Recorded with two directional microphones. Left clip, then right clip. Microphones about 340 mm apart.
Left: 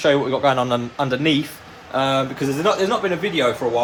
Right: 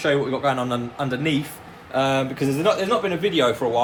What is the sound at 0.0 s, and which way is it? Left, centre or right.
A man's voice, centre.